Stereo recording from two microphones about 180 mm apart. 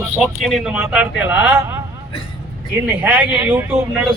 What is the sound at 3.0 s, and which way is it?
Speech, 10° right (ahead or behind).